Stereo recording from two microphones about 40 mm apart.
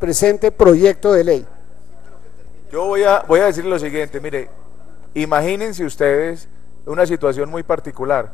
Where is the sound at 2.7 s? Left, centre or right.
Left.